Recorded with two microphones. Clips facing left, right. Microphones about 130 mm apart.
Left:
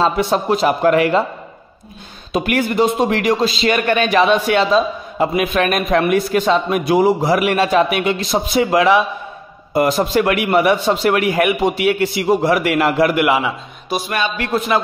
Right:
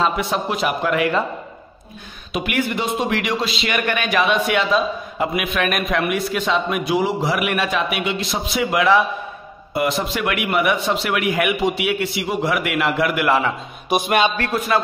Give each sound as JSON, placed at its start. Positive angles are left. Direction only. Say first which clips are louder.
{"t": 0.0, "sound": "a man's voice", "louder": "left 4 dB", "side_deg": 35}
{"t": 2.3, "sound": "a man's voice", "louder": "left 5 dB", "side_deg": 40}
{"t": 13.1, "sound": "a man's voice", "louder": "left 3 dB", "side_deg": 20}
{"t": 13.8, "sound": "a sound", "louder": "right 3 dB", "side_deg": -20}
{"t": 14.5, "sound": "a man's voice", "louder": "left 2 dB", "side_deg": 20}